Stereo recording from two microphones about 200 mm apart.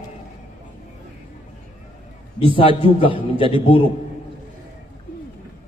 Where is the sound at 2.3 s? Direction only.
25° left (ahead or behind).